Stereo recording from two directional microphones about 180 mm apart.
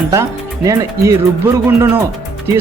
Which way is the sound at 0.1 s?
20° right (ahead or behind).